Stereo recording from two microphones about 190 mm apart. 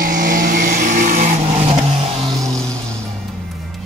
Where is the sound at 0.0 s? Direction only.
45° right (ahead or behind).